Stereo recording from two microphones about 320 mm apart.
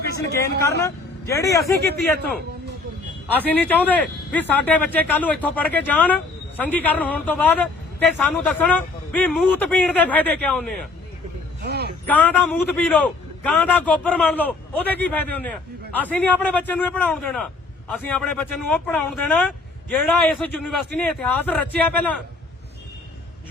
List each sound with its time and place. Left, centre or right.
0.9 s speech: centre
3.3 s a man's voice: centre
11.6 s a sound: right
12.0 s a man's voice: centre